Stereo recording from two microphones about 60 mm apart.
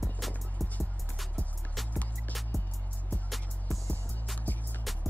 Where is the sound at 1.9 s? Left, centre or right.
Left.